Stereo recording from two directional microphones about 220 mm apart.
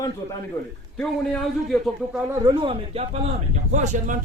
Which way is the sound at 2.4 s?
20° right (ahead or behind).